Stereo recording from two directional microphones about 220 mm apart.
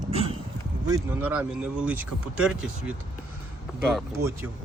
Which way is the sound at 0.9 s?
10° right (ahead or behind).